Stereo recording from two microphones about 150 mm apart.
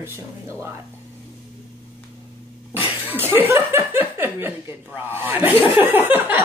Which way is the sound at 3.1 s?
15° right (ahead or behind).